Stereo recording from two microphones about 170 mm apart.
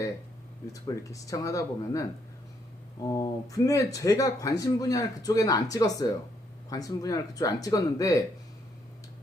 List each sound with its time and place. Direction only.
0.7 s speech: 20° left (ahead or behind)